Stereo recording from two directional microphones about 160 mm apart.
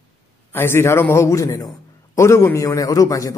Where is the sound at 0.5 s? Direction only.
15° left (ahead or behind).